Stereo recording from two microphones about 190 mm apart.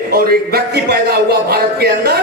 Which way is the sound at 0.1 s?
55° right (ahead or behind).